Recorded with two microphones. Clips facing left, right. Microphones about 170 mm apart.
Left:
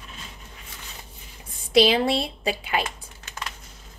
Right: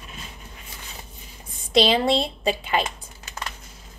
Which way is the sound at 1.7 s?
5° left (ahead or behind).